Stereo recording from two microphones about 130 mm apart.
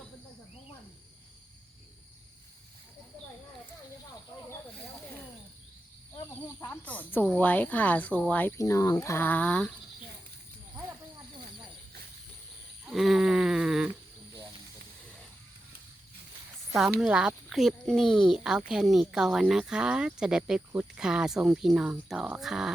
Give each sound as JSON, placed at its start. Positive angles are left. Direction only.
{"t": 6.7, "sound": "speech", "side_deg": 10}
{"t": 8.5, "sound": "speech", "side_deg": 25}
{"t": 12.8, "sound": "a sound", "side_deg": 0}
{"t": 16.7, "sound": "speech", "side_deg": 0}